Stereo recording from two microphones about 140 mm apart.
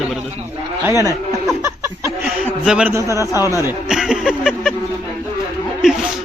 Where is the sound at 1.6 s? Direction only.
20° right (ahead or behind).